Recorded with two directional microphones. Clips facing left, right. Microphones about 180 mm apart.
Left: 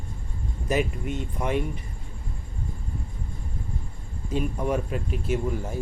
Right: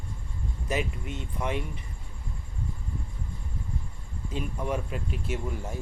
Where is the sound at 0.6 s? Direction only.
45° left (ahead or behind).